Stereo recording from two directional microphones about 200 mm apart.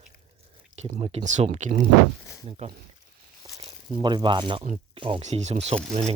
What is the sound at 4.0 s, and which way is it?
Speech, 25° right (ahead or behind).